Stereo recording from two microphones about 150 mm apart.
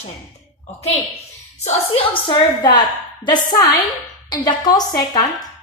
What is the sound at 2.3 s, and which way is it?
A woman's voice, 30° left (ahead or behind).